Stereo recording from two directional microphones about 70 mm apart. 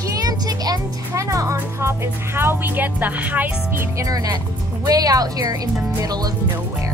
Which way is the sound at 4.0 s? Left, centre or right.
Right.